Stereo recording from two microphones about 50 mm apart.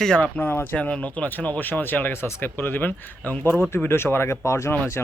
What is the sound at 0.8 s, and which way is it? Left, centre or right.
Speech, left.